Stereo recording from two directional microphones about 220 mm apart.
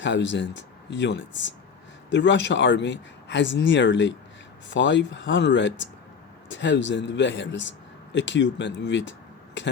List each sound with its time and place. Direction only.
0.0 s speech: 55° left (ahead or behind)